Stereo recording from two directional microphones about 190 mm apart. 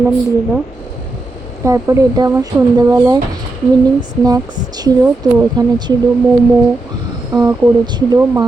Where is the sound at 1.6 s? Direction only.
15° right (ahead or behind).